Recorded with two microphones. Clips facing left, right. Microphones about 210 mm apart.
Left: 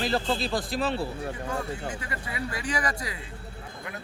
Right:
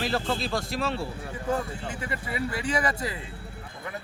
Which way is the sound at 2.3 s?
25° right (ahead or behind).